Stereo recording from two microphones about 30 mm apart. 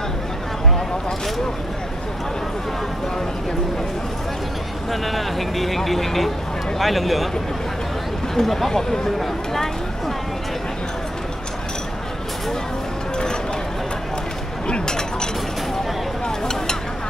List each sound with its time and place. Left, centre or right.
5.0 s speech: centre
8.4 s speech: centre
14.7 s chink: left
16.3 s a sound: left